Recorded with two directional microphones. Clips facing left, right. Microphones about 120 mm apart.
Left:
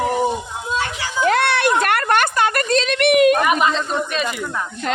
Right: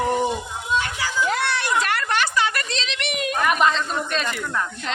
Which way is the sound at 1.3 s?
65° left (ahead or behind).